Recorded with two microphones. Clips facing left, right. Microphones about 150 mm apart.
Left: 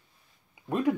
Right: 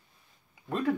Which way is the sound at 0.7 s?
15° left (ahead or behind).